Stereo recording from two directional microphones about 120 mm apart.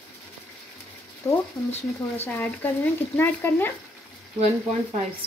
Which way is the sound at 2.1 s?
15° left (ahead or behind).